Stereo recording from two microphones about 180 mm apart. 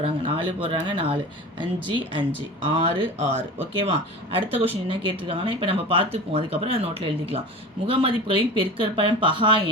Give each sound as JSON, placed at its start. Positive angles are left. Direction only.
{"t": 0.3, "sound": "speech", "side_deg": -30}
{"t": 4.5, "sound": "speech", "side_deg": -10}
{"t": 5.3, "sound": "speech", "side_deg": -30}